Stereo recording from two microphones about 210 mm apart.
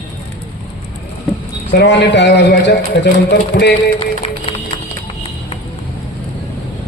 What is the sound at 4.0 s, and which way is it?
Music, 25° left (ahead or behind).